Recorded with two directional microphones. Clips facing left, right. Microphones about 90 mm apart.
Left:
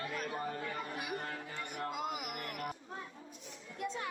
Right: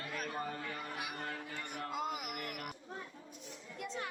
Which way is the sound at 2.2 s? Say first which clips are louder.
Left 2 dB; 40° left (ahead or behind).